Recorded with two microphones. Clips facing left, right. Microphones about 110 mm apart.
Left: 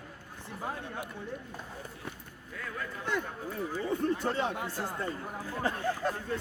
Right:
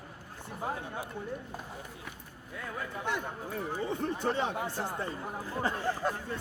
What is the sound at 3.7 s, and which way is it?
Speech, 20° right (ahead or behind).